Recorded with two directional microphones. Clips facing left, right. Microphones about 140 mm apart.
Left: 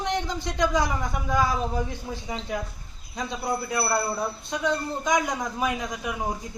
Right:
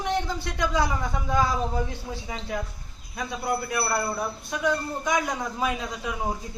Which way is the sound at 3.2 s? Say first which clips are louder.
Even; 20° left (ahead or behind).